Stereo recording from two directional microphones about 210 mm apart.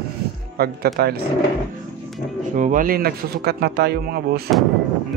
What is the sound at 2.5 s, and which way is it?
Speech, 40° right (ahead or behind).